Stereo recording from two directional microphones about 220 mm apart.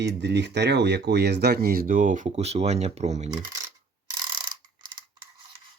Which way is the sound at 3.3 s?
15° right (ahead or behind).